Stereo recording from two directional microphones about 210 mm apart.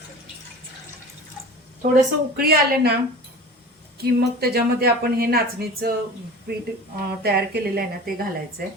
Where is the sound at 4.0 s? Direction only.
45° right (ahead or behind).